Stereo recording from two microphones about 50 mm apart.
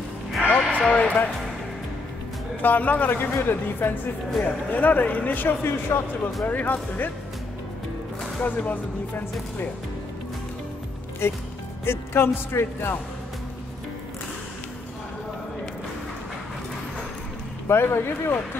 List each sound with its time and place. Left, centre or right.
0.7 s a sound: left
2.6 s speech: left
3.1 s speech: left
6.4 s speech: left
8.4 s speech: left
11.2 s speech: left
17.6 s speech: left